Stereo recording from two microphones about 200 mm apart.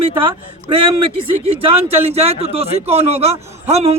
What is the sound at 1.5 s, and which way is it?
Speech, 30° right (ahead or behind).